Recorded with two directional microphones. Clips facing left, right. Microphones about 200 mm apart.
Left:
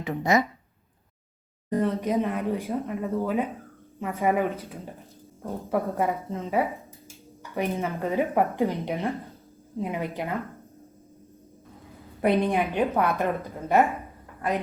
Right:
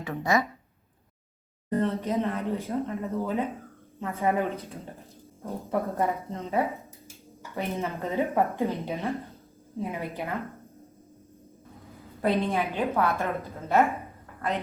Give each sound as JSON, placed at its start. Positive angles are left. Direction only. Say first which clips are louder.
{"t": 0.0, "sound": "speech", "louder": "left 3 dB", "side_deg": 20}
{"t": 1.7, "sound": "speech", "louder": "left 2 dB", "side_deg": 15}
{"t": 6.1, "sound": "speech", "louder": "left 2 dB", "side_deg": 0}
{"t": 7.4, "sound": "speech", "louder": "left 3 dB", "side_deg": 15}
{"t": 12.2, "sound": "speech", "louder": "left 3 dB", "side_deg": 15}